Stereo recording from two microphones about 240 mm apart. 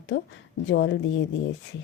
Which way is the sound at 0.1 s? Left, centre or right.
Left.